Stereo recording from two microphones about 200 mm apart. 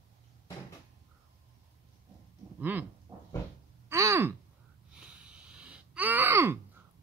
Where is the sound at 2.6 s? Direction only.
10° right (ahead or behind).